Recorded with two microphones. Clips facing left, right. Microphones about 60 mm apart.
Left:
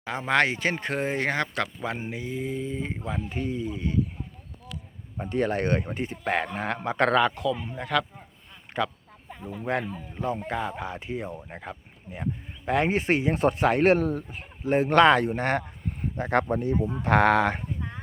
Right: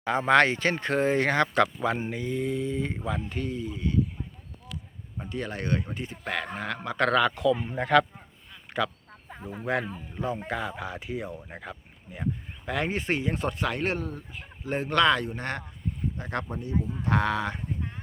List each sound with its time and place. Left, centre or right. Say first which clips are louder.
0.0 s speech: right 3 dB; centre
5.3 s speech: left 6 dB; left
6.9 s speech: left 1 dB; centre
7.5 s speech: right 4 dB; centre
9.6 s speech: even; centre
12.7 s speech: left 5 dB; centre
13.5 s speech: left 8 dB; left
14.0 s speech: left 8 dB; left
14.8 s speech: left 4 dB; left
15.9 s a sound: left 6 dB; left
16.5 s speech: left 9 dB; left
16.8 s speech: left 6 dB; left